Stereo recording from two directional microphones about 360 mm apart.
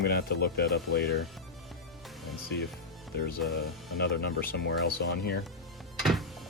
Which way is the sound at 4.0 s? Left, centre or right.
Left.